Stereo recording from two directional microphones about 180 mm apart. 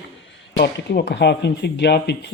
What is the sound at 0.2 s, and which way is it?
Speech, 75° left (ahead or behind).